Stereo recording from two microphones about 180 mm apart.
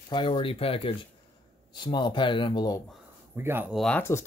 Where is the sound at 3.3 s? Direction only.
15° right (ahead or behind).